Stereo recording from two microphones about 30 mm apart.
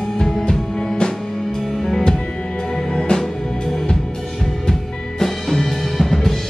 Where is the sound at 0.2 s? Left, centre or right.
Centre.